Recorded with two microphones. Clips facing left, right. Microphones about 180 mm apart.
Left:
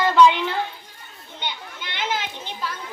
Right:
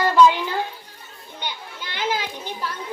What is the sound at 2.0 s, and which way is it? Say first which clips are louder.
Children playing: right 2 dB; 10° right (ahead or behind).